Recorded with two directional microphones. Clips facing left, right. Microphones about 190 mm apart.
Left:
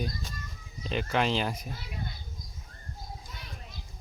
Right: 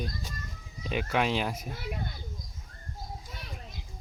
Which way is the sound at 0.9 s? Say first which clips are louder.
Even; 5° right (ahead or behind).